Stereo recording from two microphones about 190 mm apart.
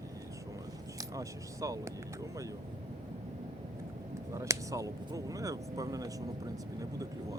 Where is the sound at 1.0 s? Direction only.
20° right (ahead or behind).